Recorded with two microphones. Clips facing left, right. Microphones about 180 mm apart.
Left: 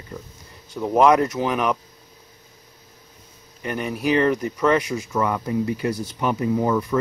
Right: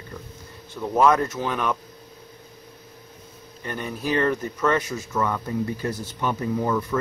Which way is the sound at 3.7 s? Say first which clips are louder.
Left 5 dB; 15° left (ahead or behind).